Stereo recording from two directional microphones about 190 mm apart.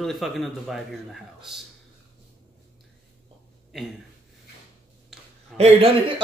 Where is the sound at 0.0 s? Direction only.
Centre (ahead or behind).